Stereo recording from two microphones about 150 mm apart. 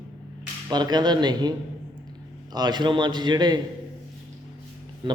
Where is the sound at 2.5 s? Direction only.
30° right (ahead or behind).